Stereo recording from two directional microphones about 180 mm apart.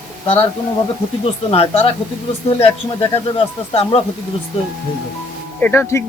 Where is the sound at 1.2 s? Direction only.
35° left (ahead or behind).